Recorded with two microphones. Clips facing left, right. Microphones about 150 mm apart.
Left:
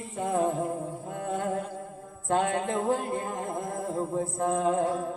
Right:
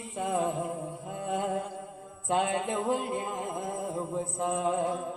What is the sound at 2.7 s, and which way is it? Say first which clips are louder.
Singing: left 2 dB; 15° right (ahead or behind).